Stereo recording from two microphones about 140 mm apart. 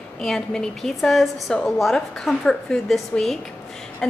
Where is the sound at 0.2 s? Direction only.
5° left (ahead or behind).